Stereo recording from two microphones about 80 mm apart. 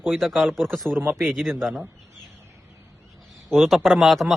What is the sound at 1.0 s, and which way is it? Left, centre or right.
Speech, right.